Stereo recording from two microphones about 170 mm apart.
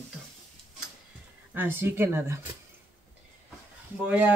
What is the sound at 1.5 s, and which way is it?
Speech, 10° right (ahead or behind).